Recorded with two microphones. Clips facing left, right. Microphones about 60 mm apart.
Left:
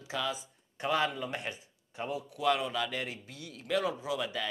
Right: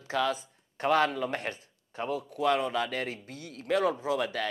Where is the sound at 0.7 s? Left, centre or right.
Right.